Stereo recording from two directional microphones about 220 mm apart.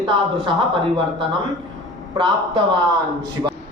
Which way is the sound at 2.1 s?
25° right (ahead or behind).